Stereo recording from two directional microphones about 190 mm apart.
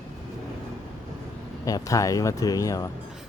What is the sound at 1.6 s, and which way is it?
Speech, 20° left (ahead or behind).